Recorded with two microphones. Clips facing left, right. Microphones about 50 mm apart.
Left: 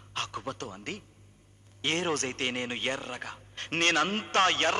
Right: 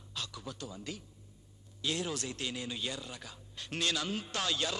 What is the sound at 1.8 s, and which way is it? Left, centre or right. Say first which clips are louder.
Speech: left 6 dB; left.